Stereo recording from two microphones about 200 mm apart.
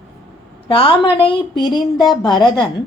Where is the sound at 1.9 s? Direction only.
Centre (ahead or behind).